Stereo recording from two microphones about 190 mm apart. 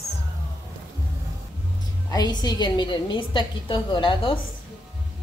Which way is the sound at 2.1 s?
20° left (ahead or behind).